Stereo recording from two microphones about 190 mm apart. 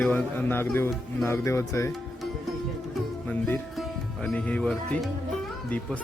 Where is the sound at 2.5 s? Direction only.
5° left (ahead or behind).